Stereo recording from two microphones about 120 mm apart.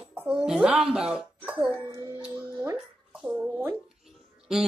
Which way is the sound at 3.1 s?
10° right (ahead or behind).